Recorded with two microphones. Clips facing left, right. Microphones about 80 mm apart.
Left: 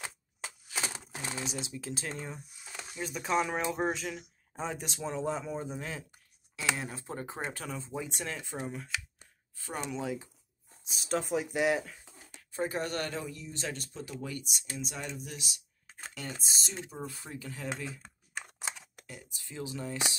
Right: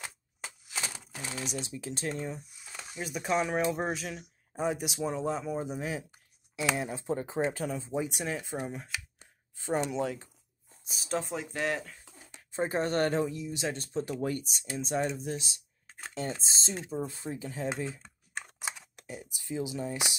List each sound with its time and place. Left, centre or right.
1.2 s speech: left
1.5 s speech: centre
9.9 s speech: centre
11.5 s speech: centre
12.4 s speech: right
13.3 s speech: centre
13.7 s speech: right; by 20.2 s centre